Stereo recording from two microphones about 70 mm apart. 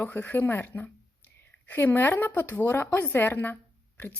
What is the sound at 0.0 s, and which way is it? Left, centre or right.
A woman's voice, left.